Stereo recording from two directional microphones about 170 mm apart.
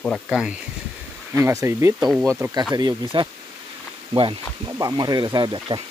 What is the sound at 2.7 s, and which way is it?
Speech, 25° right (ahead or behind).